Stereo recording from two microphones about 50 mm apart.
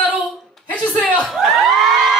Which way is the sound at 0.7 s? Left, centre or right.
Left.